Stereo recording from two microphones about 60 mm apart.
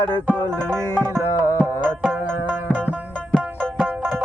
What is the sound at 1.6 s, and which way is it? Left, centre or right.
Music, right.